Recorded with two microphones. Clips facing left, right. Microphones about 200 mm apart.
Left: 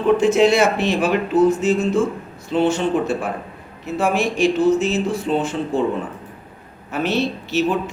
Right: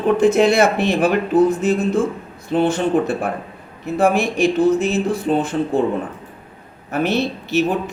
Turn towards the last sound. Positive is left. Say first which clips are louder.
# right 1 dB
turn(degrees=-55)  # may be behind; listen again after turning